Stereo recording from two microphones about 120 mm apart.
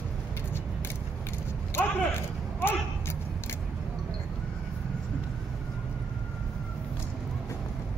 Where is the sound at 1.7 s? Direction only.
20° left (ahead or behind).